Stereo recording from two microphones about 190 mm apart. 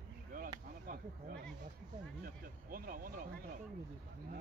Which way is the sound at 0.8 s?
50° right (ahead or behind).